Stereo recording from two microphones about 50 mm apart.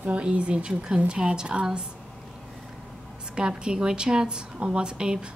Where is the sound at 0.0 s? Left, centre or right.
Right.